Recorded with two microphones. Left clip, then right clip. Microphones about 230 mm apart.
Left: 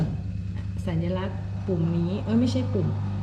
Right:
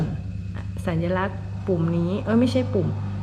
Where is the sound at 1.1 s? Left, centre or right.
Centre.